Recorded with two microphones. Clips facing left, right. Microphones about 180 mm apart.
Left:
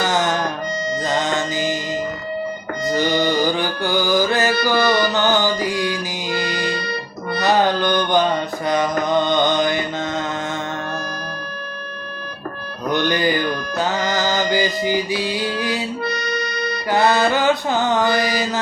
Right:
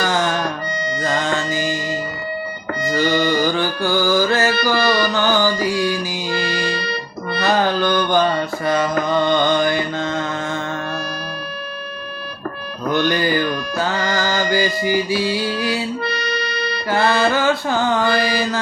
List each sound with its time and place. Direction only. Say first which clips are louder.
0.0 s music: even; 20° left (ahead or behind)
12.8 s music: right 1 dB; 20° left (ahead or behind)
16.9 s mantra: left 1 dB; 20° left (ahead or behind)